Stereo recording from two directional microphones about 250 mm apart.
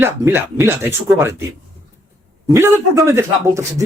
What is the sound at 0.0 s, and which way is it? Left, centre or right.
A man's voice, centre.